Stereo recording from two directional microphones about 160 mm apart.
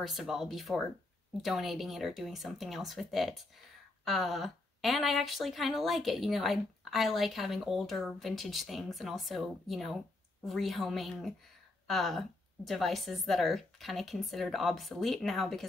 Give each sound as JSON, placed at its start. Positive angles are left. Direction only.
{"t": 0.0, "sound": "speech", "side_deg": 0}